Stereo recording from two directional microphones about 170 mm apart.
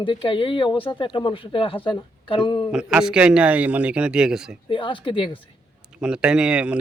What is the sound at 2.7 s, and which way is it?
Speech, 5° right (ahead or behind).